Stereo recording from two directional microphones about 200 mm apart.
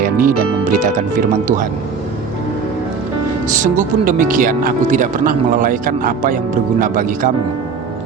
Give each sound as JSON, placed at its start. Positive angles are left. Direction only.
{"t": 0.0, "sound": "speech", "side_deg": -45}
{"t": 3.6, "sound": "speech", "side_deg": -40}